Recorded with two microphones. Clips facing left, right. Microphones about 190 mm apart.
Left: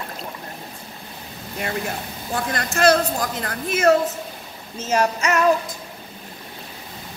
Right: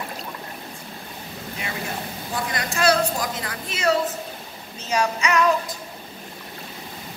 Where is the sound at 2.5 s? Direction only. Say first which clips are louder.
Left 3 dB; 50° left (ahead or behind).